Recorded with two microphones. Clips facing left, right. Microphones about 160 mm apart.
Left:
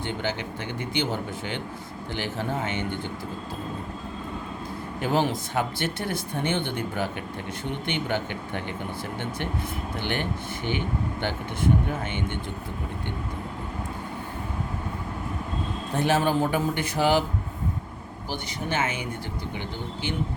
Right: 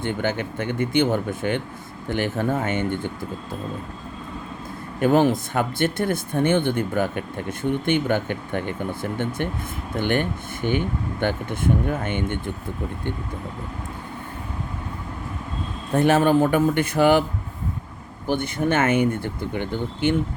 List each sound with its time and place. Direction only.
0.0 s speech: 50° right (ahead or behind)
4.9 s speech: 55° right (ahead or behind)
16.0 s speech: 55° right (ahead or behind)
18.3 s speech: 55° right (ahead or behind)